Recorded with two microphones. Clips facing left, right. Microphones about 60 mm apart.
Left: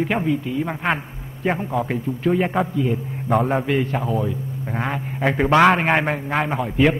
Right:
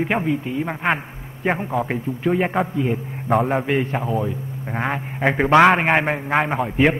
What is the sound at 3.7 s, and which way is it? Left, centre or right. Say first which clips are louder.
A man's voice: even; centre.